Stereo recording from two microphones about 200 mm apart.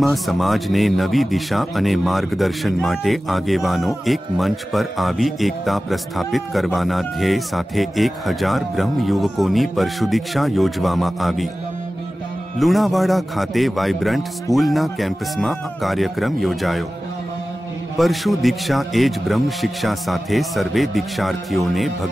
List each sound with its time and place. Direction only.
0.0 s speech: centre (ahead or behind)
12.5 s speech: centre (ahead or behind)
17.9 s speech: centre (ahead or behind)